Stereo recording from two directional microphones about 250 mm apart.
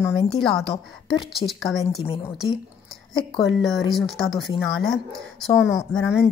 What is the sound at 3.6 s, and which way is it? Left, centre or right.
A woman's voice, centre.